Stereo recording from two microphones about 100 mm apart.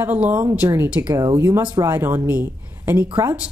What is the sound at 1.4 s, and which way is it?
A woman's voice, 30° right (ahead or behind).